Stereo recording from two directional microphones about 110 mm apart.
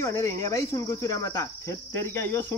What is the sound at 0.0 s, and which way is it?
Cricket, 25° left (ahead or behind).